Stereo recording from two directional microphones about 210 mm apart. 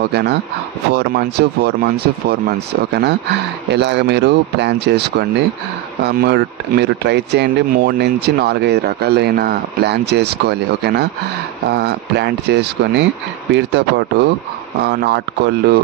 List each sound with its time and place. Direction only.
0.1 s speech: 55° right (ahead or behind)